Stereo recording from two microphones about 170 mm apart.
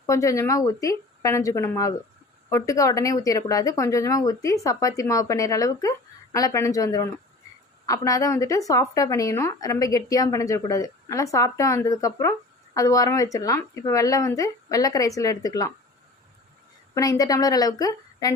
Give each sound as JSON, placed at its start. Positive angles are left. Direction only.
{"t": 0.0, "sound": "a woman's voice", "side_deg": 20}
{"t": 16.9, "sound": "a woman's voice", "side_deg": 20}